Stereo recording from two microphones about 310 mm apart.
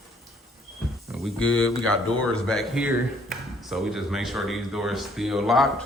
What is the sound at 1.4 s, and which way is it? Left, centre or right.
Speech, left.